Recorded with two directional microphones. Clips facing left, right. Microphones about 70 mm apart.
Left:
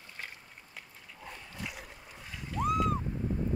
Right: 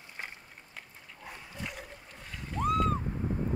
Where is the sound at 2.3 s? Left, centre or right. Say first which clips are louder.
Right 1 dB; centre.